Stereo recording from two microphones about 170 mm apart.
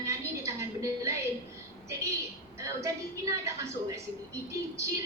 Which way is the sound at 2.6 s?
20° right (ahead or behind).